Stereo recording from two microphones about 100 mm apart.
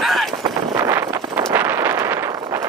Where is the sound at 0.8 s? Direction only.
25° right (ahead or behind).